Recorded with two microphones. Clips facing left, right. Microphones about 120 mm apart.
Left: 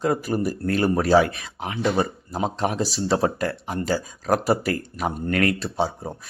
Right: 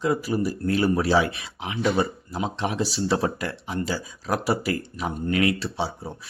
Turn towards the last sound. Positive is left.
turn(degrees=45)  # may be behind; listen again after turning